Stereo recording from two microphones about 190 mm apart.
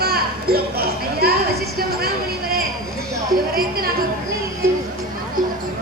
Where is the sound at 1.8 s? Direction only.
55° right (ahead or behind).